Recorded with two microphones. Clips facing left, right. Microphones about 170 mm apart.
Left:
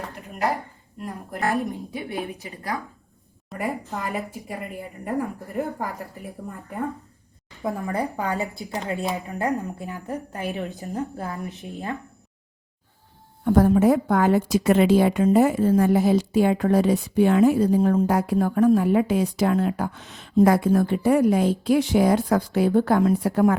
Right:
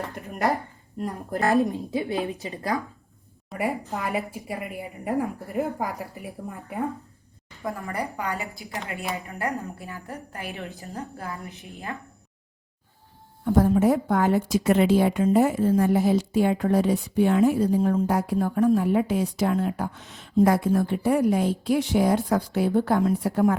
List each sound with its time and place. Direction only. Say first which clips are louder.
0.9 s a woman's voice: right 4 dB; 35° right (ahead or behind)
1.5 s a woman's voice: right 4 dB; 25° right (ahead or behind)
3.5 s a woman's voice: right 1 dB; 5° right (ahead or behind)
7.6 s a woman's voice: left 4 dB; 20° left (ahead or behind)
9.1 s a woman's voice: left 4 dB; 20° left (ahead or behind)
13.4 s a woman's voice: left 3 dB; 70° left (ahead or behind); by 23.6 s 90° left